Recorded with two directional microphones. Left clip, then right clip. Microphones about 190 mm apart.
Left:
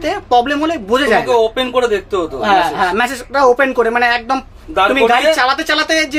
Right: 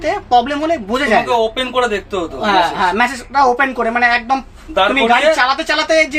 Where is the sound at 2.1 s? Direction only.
30° left (ahead or behind).